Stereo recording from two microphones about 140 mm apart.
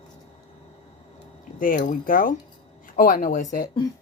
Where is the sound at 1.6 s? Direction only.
70° left (ahead or behind).